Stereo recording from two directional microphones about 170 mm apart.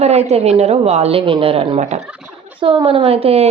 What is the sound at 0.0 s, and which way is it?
A woman's voice, 40° right (ahead or behind).